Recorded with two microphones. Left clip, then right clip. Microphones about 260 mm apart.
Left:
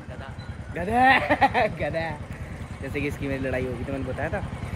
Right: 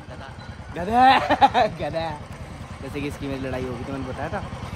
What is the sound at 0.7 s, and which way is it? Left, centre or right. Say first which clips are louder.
Speech: right 3 dB; centre.